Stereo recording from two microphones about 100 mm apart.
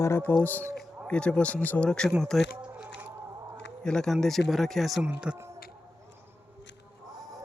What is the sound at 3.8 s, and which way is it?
Speech, 5° left (ahead or behind).